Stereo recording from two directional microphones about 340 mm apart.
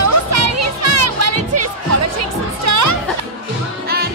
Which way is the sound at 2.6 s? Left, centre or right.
Right.